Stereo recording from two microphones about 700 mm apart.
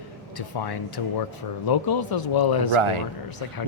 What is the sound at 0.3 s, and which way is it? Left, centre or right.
Speech, left.